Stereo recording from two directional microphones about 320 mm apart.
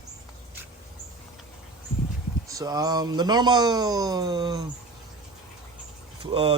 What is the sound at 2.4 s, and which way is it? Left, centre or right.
Speech, centre.